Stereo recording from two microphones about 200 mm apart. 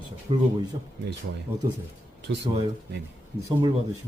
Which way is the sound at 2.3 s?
60° right (ahead or behind).